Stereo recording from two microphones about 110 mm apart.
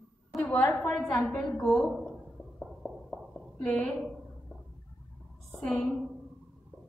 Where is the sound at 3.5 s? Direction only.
5° left (ahead or behind).